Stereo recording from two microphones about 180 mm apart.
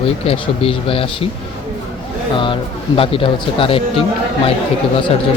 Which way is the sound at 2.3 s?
25° left (ahead or behind).